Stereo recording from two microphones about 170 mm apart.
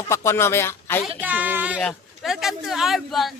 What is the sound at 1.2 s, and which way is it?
Speech, 10° right (ahead or behind).